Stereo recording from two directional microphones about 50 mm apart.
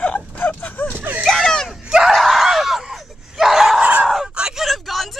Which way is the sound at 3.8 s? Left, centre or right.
Right.